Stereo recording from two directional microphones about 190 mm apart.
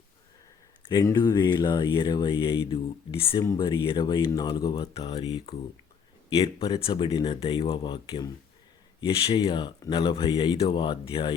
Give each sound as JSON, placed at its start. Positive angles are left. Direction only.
{"t": 0.8, "sound": "speech", "side_deg": 20}